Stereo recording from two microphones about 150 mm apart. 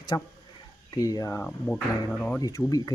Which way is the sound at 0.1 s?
25° left (ahead or behind).